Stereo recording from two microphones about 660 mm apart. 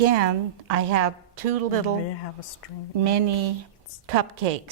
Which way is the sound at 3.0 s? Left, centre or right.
Right.